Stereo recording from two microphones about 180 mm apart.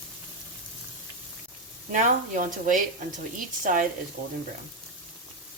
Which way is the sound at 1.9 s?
45° right (ahead or behind).